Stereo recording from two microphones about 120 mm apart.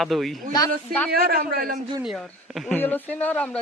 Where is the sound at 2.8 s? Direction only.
15° left (ahead or behind).